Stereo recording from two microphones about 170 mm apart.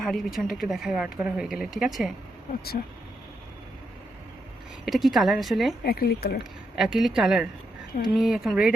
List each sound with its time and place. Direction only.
0.0 s speech: centre (ahead or behind)
4.9 s speech: centre (ahead or behind)
5.8 s speech: 65° left (ahead or behind)
6.7 s speech: centre (ahead or behind)